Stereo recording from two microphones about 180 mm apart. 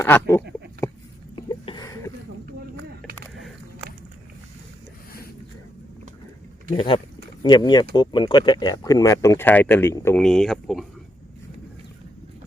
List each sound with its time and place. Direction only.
0.0 s speech: 15° left (ahead or behind)
0.8 s a sound: 15° left (ahead or behind)
6.7 s speech: 25° left (ahead or behind)
10.2 s speech: centre (ahead or behind)